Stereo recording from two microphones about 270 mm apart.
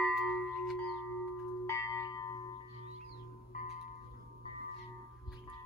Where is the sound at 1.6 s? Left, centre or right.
Centre.